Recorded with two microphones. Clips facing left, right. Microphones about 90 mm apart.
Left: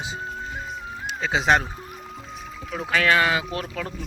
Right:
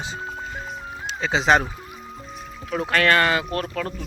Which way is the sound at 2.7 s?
Centre (ahead or behind).